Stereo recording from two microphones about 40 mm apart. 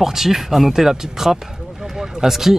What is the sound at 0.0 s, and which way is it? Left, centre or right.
Speech, centre.